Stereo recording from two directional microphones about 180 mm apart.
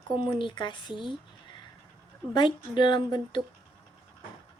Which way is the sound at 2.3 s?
25° left (ahead or behind).